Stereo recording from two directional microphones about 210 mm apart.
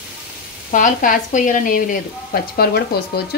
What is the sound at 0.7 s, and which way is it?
A woman's voice, 40° left (ahead or behind).